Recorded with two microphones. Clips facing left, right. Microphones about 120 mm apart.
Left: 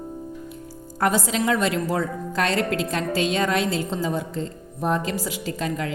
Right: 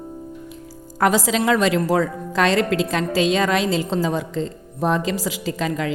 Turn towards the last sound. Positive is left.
turn(degrees=-90)